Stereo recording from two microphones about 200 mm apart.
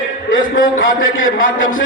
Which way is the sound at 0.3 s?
75° left (ahead or behind).